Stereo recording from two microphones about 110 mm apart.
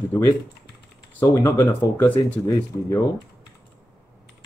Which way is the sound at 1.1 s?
25° left (ahead or behind).